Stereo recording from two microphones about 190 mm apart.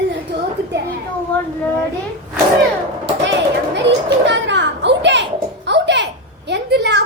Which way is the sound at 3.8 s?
65° right (ahead or behind).